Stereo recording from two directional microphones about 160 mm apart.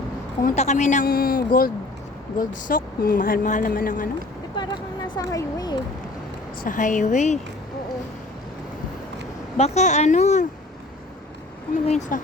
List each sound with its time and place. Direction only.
0.4 s speech: 45° left (ahead or behind)
1.0 s speech: 65° left (ahead or behind)
4.5 s a sound: 25° left (ahead or behind)
6.7 s speech: 55° left (ahead or behind)
9.6 s speech: 45° left (ahead or behind)
11.9 s speech: 50° left (ahead or behind)